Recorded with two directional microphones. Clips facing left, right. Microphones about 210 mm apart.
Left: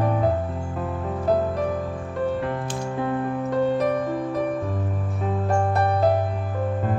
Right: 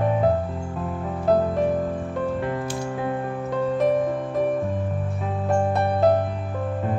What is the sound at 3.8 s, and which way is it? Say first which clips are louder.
Music: right 2 dB; centre (ahead or behind).